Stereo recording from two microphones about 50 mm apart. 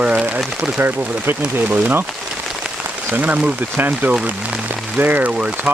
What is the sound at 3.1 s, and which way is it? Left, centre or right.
Speech, right.